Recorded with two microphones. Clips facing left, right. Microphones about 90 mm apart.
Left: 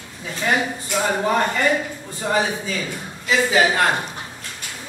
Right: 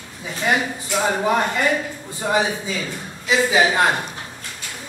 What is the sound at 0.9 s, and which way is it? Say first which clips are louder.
A man's voice: right 1 dB; 10° right (ahead or behind).